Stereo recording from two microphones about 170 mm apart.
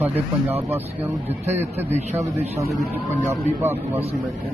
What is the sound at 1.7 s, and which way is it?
Speech, 40° right (ahead or behind).